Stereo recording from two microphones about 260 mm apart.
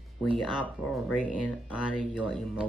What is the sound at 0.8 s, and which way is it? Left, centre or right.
Speech, centre.